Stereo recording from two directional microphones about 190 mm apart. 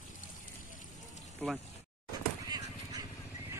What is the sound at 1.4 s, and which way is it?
Speech, centre (ahead or behind).